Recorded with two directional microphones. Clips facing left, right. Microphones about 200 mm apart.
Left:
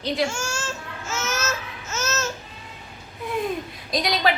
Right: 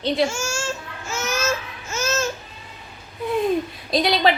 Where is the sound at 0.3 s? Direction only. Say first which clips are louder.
Right 2 dB; 10° right (ahead or behind).